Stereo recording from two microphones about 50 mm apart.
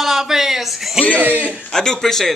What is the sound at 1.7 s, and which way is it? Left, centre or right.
Speech, centre.